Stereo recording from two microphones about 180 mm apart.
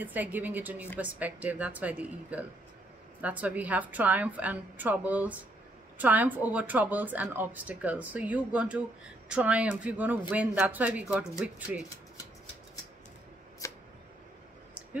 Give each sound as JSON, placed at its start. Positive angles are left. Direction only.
{"t": 0.0, "sound": "speech", "side_deg": -10}
{"t": 13.6, "sound": "camera", "side_deg": 15}